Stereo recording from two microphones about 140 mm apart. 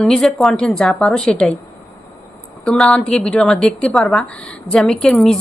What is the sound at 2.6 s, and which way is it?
A woman's voice, 5° left (ahead or behind).